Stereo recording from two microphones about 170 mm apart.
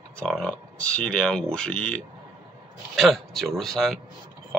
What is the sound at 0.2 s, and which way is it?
Speech, 5° left (ahead or behind).